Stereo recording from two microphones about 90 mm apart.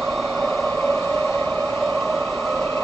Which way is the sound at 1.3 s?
15° left (ahead or behind).